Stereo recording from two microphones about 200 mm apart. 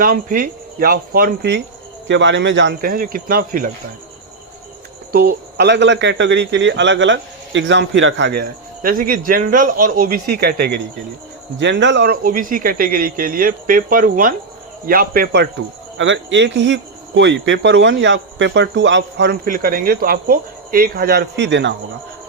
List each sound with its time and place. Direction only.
0.0 s speech: 45° right (ahead or behind); by 2.7 s 65° right (ahead or behind)
2.8 s speech: 45° right (ahead or behind)
5.1 s speech: 50° right (ahead or behind)
11.6 s speech: 65° right (ahead or behind)
12.2 s speech: 45° right (ahead or behind)
16.0 s speech: 65° right (ahead or behind)
19.5 s speech: 45° right (ahead or behind); by 21.8 s 65° right (ahead or behind)